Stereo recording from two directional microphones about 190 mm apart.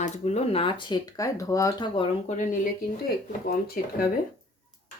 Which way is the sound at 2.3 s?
40° left (ahead or behind).